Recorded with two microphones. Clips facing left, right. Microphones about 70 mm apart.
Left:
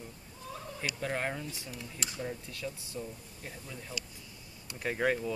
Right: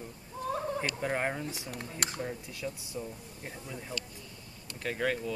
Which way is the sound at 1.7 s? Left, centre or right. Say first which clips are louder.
Right 4 dB; right.